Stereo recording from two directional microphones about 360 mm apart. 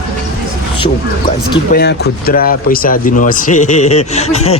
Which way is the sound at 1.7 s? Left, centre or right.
Left.